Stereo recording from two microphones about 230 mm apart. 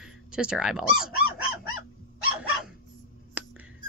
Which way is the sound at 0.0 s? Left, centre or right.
Centre.